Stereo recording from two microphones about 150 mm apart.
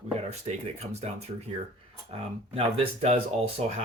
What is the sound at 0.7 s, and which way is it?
Speech, 45° right (ahead or behind).